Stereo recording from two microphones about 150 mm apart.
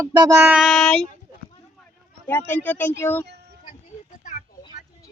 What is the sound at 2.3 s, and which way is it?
Speech, 10° left (ahead or behind).